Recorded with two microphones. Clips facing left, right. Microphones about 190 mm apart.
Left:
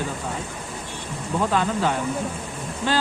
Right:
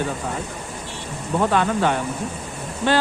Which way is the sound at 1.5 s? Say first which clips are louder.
Right 2 dB; 65° right (ahead or behind).